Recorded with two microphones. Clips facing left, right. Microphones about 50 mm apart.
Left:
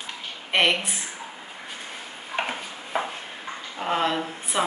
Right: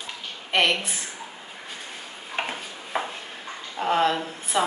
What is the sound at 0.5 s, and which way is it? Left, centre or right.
Speech, left.